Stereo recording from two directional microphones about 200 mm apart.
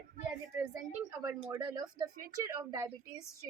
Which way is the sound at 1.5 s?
20° right (ahead or behind).